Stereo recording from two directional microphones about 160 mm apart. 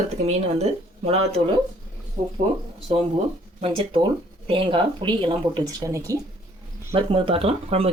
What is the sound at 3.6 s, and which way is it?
Speech, 35° right (ahead or behind).